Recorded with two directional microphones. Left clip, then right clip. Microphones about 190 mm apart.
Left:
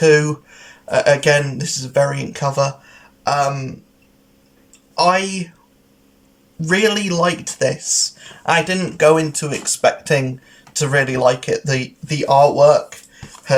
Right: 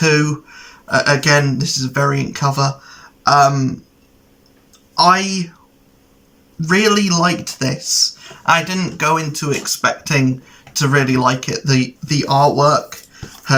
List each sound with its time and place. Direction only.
0.0 s speech: 15° left (ahead or behind)
4.9 s speech: 15° left (ahead or behind)
6.7 s speech: 15° left (ahead or behind)